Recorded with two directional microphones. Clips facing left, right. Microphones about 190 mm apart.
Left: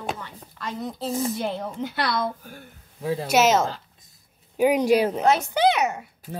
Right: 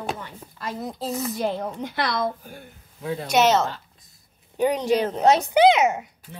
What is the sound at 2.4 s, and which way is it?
Speech, 15° right (ahead or behind).